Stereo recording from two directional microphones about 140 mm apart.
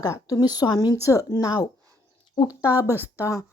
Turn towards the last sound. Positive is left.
turn(degrees=20)  # may be behind; listen again after turning